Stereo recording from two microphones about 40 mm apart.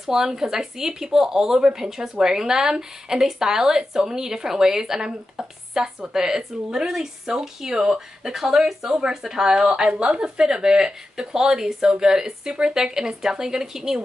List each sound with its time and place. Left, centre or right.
0.0 s speech: centre
8.9 s speech: right